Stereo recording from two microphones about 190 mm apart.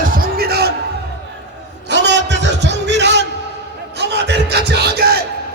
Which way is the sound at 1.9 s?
65° right (ahead or behind).